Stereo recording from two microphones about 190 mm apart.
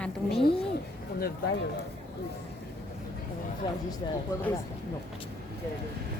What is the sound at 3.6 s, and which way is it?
Speech, 20° left (ahead or behind).